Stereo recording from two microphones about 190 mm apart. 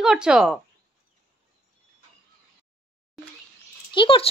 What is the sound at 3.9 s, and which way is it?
Speech, 25° left (ahead or behind).